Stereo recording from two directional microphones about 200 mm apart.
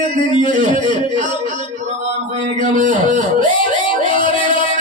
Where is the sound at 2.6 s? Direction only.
40° right (ahead or behind).